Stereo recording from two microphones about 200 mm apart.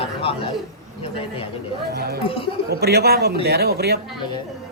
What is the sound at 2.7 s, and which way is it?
A man's voice, 50° right (ahead or behind).